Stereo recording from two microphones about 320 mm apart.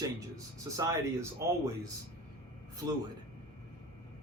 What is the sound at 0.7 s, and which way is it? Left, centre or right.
Speech, centre.